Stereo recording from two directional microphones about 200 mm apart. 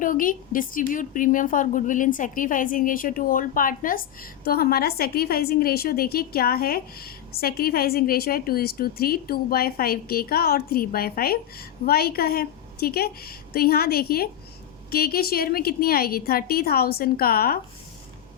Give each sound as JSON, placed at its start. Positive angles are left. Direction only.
{"t": 0.0, "sound": "a woman's voice", "side_deg": 45}